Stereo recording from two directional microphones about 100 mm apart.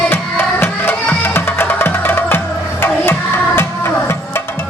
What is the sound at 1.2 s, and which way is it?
Music, 20° left (ahead or behind).